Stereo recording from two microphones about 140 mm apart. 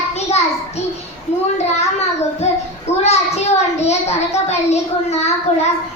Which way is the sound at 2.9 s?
50° left (ahead or behind).